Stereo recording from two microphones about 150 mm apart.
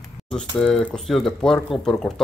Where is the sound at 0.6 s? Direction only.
5° left (ahead or behind).